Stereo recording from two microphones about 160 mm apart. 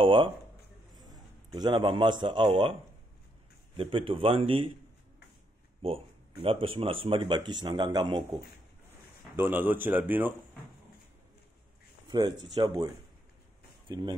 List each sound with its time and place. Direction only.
0.0 s a man's voice: 30° right (ahead or behind)
5.8 s speech: 35° right (ahead or behind)
9.4 s a man's voice: 10° right (ahead or behind)
12.1 s speech: 30° right (ahead or behind)